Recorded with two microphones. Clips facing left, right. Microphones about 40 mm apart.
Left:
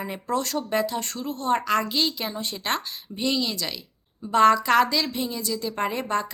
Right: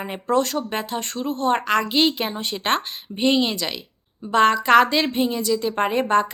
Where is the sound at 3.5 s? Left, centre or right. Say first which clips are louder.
Right 4 dB; centre.